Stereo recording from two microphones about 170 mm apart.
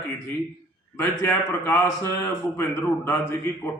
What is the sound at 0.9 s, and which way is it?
A man's voice, 15° left (ahead or behind).